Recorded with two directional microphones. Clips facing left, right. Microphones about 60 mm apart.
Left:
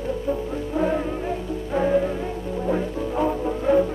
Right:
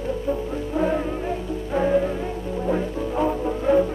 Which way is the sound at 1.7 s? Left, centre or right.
Centre.